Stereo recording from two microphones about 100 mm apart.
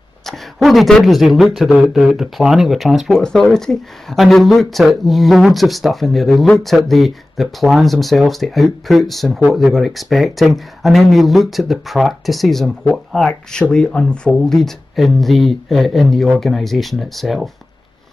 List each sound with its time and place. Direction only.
0.2 s speech: centre (ahead or behind)